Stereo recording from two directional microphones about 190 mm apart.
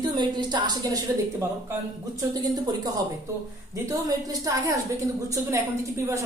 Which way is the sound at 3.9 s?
20° right (ahead or behind).